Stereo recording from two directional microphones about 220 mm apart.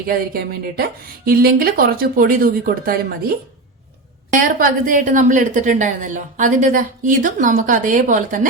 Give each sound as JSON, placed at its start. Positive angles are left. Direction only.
{"t": 0.1, "sound": "speech", "side_deg": -45}
{"t": 4.4, "sound": "a woman's voice", "side_deg": -35}